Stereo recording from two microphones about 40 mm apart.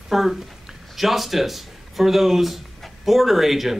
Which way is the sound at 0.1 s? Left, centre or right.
Centre.